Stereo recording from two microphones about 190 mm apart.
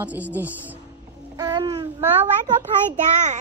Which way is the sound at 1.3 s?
20° right (ahead or behind).